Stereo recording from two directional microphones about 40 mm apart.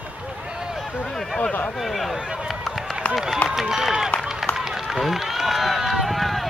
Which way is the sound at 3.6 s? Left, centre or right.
Centre.